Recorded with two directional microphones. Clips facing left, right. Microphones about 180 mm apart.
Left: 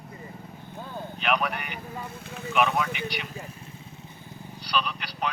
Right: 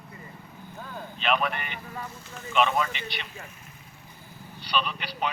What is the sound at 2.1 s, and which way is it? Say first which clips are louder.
Speech: left 4 dB; 60° left (ahead or behind).